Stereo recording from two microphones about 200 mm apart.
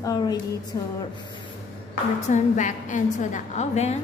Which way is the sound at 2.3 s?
40° left (ahead or behind).